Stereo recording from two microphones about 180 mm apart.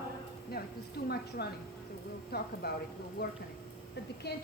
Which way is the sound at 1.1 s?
60° left (ahead or behind).